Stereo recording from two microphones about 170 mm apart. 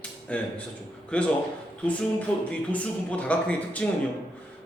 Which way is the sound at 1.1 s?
5° left (ahead or behind).